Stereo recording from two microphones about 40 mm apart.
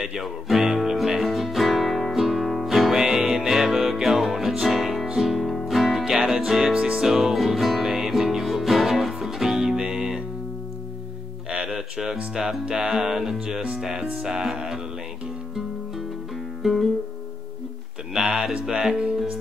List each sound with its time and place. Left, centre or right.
0.0 s music: centre
6.7 s music: right
7.1 s music: centre
9.8 s music: centre
11.5 s music: centre
16.6 s music: centre
18.1 s speech: centre